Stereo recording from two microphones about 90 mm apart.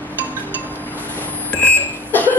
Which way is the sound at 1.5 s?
20° left (ahead or behind).